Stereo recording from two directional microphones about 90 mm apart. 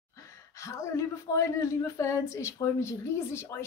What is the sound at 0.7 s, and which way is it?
A woman's voice, 35° left (ahead or behind).